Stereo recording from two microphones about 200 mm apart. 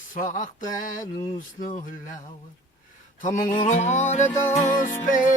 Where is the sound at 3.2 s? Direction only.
40° left (ahead or behind).